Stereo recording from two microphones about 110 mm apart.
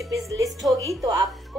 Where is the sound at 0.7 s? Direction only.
35° right (ahead or behind).